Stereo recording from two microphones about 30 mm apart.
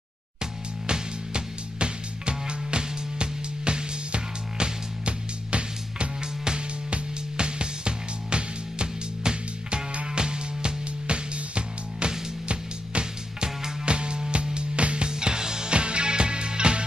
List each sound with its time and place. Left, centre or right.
0.4 s music: right
13.4 s music: right
15.0 s music: right
15.7 s music: right